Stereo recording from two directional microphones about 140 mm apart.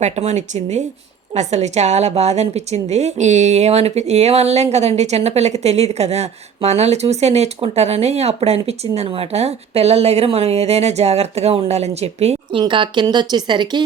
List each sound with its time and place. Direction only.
0.0 s a woman's voice: 55° right (ahead or behind); by 13.8 s 35° right (ahead or behind)